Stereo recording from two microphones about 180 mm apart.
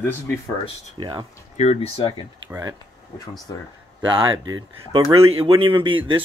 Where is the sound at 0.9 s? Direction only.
25° right (ahead or behind).